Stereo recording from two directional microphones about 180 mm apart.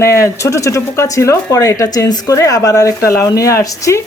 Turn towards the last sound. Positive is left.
turn(degrees=15)  # may be behind; listen again after turning